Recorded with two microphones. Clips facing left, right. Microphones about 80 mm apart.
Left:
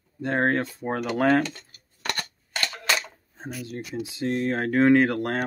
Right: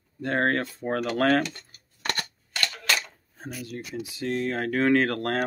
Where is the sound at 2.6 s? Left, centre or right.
Centre.